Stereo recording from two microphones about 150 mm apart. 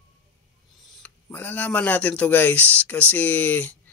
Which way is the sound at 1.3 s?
10° left (ahead or behind).